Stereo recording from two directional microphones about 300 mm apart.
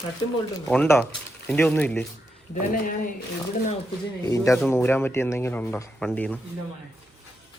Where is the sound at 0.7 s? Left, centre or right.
Centre.